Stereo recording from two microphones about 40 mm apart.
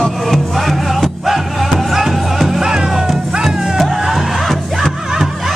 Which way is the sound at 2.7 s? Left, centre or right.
Centre.